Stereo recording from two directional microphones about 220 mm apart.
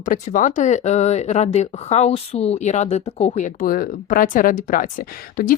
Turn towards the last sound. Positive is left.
turn(degrees=40)  # may be behind; listen again after turning